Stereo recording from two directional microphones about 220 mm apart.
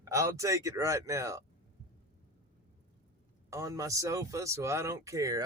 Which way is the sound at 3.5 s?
15° right (ahead or behind).